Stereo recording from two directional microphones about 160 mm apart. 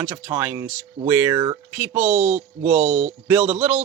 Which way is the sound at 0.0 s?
10° right (ahead or behind).